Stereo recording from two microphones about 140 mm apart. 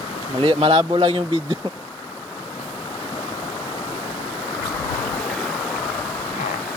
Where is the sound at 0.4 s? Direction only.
40° right (ahead or behind).